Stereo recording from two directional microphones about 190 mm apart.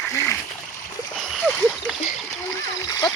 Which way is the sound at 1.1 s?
Centre (ahead or behind).